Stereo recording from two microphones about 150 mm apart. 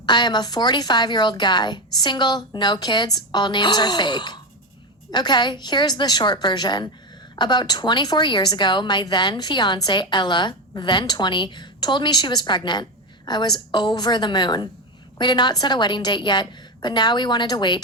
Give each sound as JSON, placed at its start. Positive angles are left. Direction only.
{"t": 0.0, "sound": "a woman's voice", "side_deg": 30}